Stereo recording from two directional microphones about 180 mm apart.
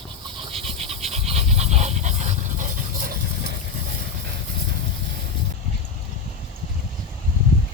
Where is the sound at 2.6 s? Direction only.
50° right (ahead or behind).